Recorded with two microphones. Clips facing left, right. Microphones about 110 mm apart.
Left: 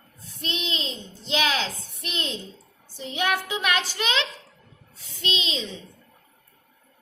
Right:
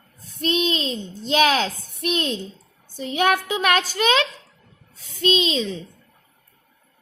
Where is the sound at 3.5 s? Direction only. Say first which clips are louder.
Right 5 dB; 50° right (ahead or behind).